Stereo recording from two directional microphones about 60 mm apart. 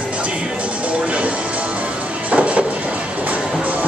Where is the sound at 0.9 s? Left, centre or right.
Right.